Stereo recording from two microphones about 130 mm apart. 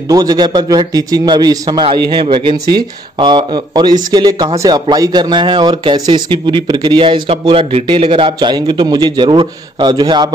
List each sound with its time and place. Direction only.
0.1 s speech: 30° right (ahead or behind)
1.9 s speech: 40° right (ahead or behind)